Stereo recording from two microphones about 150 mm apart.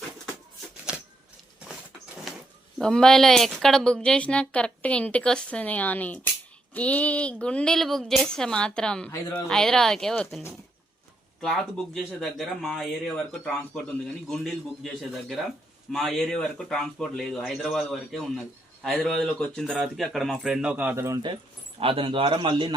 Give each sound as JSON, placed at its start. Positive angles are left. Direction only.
{"t": 2.7, "sound": "a woman's voice", "side_deg": 5}
{"t": 12.6, "sound": "speech", "side_deg": 5}
{"t": 14.8, "sound": "speech", "side_deg": 0}
{"t": 21.8, "sound": "speech", "side_deg": -35}